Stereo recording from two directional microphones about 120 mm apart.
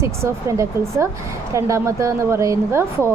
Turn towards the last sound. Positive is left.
turn(degrees=-25)  # may be behind; listen again after turning